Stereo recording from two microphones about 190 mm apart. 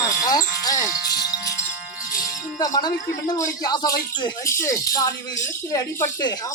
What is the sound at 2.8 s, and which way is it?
Speech, 20° left (ahead or behind).